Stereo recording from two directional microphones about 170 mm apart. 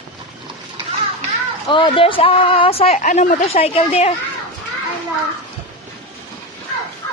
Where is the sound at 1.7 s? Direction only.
30° left (ahead or behind).